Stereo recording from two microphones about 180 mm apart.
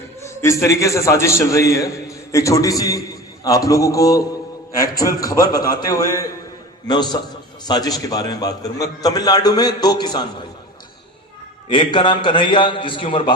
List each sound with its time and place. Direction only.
0.4 s a man's voice: 15° left (ahead or behind)
11.7 s a man's voice: 25° left (ahead or behind)